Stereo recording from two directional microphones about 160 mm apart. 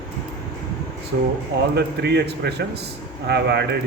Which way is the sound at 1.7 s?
90° right.